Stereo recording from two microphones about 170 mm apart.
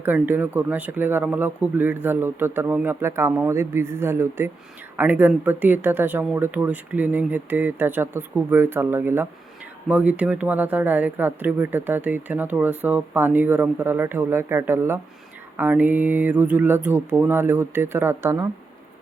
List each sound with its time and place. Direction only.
0.0 s speech: 10° right (ahead or behind)